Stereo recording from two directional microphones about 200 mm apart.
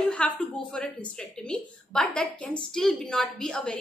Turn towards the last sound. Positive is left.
turn(degrees=5)  # may be behind; listen again after turning